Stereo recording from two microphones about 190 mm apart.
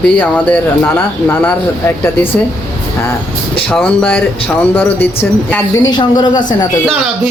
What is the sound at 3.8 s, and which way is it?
A woman's voice, 10° left (ahead or behind).